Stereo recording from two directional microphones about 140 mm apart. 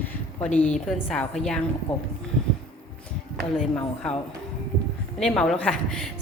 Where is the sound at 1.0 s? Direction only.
5° left (ahead or behind).